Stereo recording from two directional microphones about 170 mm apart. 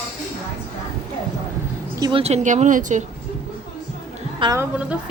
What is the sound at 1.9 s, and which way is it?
Speech, 20° right (ahead or behind).